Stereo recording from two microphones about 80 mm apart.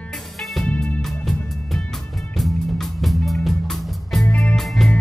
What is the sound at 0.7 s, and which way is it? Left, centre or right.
Music, centre.